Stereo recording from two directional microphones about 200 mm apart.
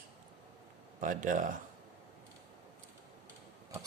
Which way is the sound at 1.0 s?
40° right (ahead or behind).